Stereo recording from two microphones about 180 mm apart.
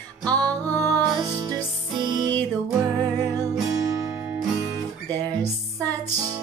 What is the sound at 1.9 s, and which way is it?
Music, 25° right (ahead or behind).